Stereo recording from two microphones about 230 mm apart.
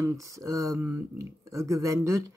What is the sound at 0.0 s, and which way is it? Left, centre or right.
Speech, centre.